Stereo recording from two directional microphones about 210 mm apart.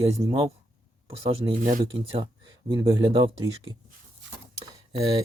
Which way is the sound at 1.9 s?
25° right (ahead or behind).